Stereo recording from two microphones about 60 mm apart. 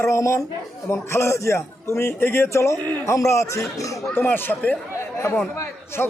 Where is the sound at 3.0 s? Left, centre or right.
Left.